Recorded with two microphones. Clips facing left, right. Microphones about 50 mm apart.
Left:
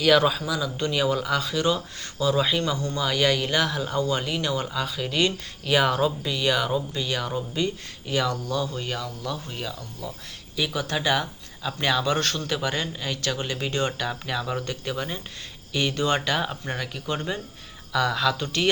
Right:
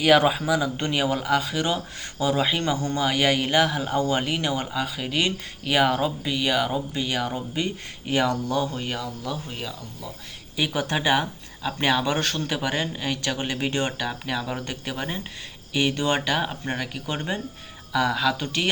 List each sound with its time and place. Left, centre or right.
0.0 s speech: right
7.3 s speech: right
8.7 s speech: centre
10.8 s speech: right
14.0 s speech: centre